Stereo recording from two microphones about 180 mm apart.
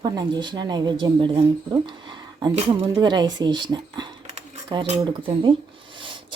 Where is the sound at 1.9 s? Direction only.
25° right (ahead or behind).